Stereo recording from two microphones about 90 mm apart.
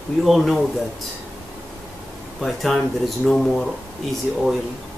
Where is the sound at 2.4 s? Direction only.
Centre (ahead or behind).